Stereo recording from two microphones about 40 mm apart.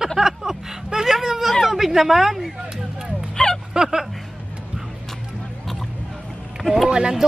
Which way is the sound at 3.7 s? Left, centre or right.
Centre.